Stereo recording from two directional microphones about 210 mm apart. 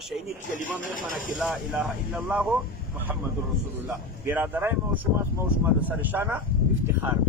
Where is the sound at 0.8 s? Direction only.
40° left (ahead or behind).